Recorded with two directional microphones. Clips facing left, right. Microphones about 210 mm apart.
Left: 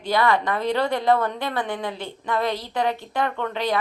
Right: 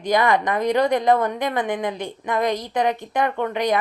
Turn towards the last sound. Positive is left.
turn(degrees=-15)  # may be behind; listen again after turning